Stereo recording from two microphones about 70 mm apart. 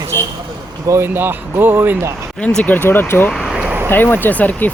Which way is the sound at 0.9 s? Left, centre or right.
Right.